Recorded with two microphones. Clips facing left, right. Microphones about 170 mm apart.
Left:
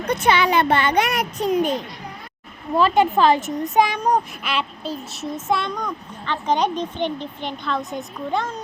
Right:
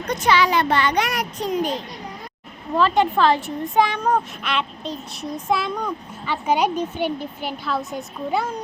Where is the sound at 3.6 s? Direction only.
15° left (ahead or behind).